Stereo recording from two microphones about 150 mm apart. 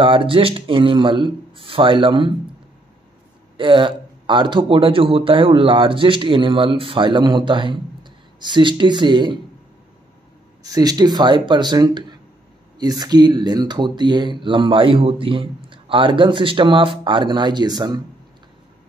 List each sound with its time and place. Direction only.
0.0 s speech: 35° right (ahead or behind)
3.5 s speech: 35° right (ahead or behind)
10.6 s speech: 25° right (ahead or behind)